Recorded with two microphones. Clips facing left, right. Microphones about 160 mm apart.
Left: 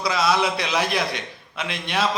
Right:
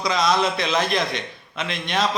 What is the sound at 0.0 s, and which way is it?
A man's voice, 5° left (ahead or behind).